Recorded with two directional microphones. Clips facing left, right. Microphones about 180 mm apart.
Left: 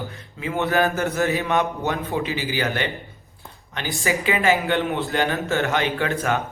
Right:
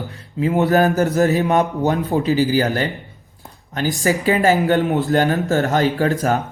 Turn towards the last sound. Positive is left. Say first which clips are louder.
# right 5 dB
turn(degrees=-35)  # may be behind; listen again after turning